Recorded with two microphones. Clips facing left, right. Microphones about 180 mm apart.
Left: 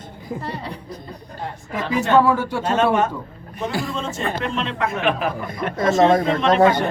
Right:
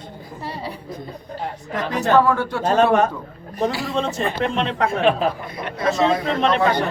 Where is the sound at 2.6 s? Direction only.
35° right (ahead or behind).